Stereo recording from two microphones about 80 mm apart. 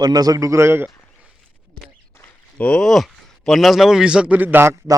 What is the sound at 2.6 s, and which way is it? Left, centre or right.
Speech, centre.